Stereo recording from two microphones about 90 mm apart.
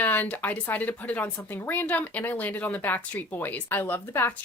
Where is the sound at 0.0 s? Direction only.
20° left (ahead or behind).